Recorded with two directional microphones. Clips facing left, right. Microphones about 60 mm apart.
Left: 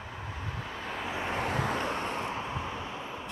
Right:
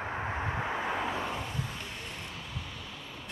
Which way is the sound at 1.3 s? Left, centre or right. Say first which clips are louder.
Left 8 dB; left.